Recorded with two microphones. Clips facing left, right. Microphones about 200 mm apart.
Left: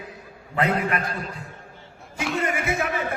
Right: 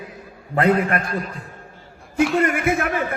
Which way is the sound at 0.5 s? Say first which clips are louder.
Right 5 dB; 50° right (ahead or behind).